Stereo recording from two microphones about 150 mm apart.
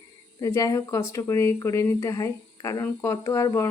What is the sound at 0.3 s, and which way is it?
Speech, 20° left (ahead or behind).